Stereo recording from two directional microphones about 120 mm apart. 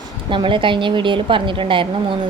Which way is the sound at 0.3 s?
45° right (ahead or behind).